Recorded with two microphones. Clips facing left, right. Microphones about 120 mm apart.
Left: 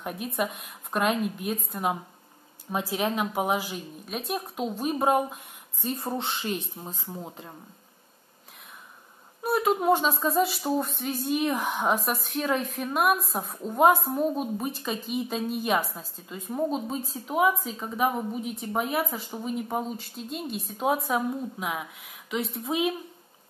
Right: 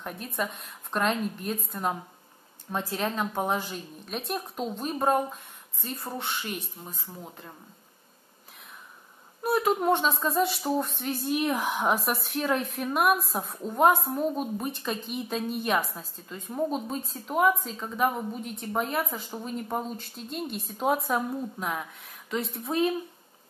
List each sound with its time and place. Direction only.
0.0 s a woman's voice: 10° left (ahead or behind)
9.4 s speech: centre (ahead or behind)